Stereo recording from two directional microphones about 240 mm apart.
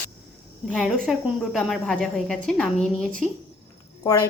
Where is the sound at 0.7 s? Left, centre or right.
Centre.